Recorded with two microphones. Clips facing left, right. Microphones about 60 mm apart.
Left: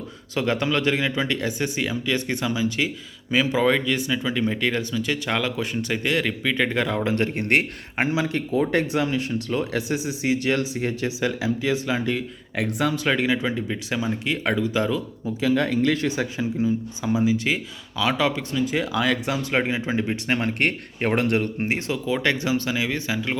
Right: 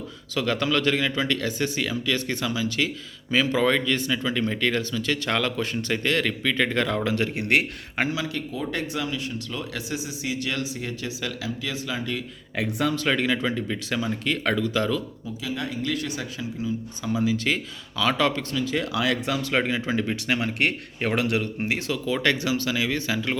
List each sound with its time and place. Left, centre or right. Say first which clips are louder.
0.3 s speech: left 1 dB; left
7.0 s speech: left 2 dB; left
12.8 s speech: left 1 dB; centre
15.4 s speech: left 9 dB; left
16.0 s speech: left 7 dB; left
18.9 s speech: left 2 dB; centre
19.3 s speech: left 1 dB; left
20.2 s speech: left 2 dB; left; by 23.4 s centre